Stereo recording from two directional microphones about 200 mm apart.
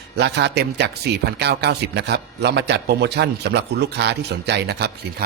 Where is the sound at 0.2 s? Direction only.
55° right (ahead or behind).